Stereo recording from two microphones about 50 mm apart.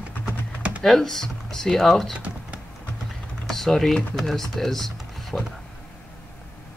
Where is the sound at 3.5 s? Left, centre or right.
Centre.